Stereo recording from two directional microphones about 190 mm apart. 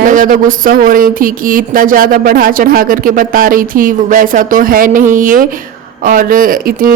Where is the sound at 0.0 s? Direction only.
45° right (ahead or behind).